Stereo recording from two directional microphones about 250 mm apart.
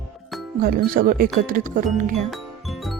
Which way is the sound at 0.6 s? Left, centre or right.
Right.